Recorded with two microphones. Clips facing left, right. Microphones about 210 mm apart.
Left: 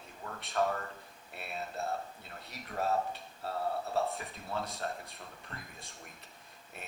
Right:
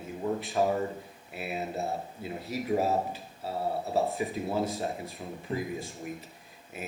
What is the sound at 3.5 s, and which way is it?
Speech, 25° right (ahead or behind).